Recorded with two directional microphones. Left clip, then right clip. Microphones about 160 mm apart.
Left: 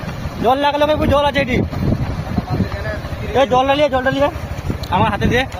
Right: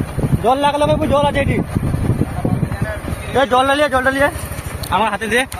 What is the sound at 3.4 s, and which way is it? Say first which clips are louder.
Speech: even; 20° left (ahead or behind).